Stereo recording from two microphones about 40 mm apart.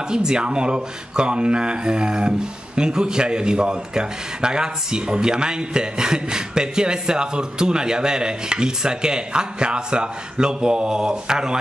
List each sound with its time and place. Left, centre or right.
0.1 s speech: centre